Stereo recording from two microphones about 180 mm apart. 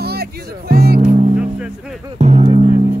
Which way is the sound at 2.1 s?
35° right (ahead or behind).